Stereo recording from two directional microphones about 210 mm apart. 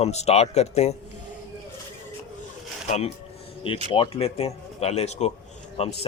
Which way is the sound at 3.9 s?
25° left (ahead or behind).